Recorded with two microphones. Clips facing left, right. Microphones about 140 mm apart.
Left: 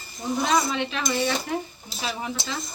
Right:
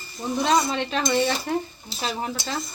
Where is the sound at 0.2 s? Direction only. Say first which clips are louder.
Right 2 dB; 35° right (ahead or behind).